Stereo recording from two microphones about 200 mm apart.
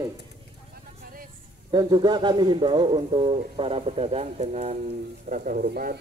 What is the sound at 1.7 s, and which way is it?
A man's voice, 20° right (ahead or behind).